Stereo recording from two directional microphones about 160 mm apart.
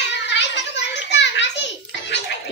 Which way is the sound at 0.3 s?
90° left.